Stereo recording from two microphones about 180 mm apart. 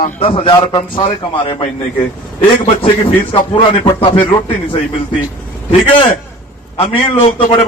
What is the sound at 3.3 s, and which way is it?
Speech, 25° left (ahead or behind).